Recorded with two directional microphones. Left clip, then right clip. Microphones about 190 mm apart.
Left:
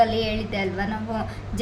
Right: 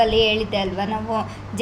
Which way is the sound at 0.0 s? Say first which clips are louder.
Right 4 dB; 40° left (ahead or behind).